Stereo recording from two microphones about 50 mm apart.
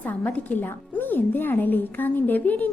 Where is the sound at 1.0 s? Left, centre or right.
Left.